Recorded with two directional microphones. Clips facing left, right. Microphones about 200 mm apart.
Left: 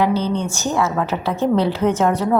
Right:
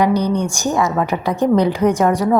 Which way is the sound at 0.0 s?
15° right (ahead or behind).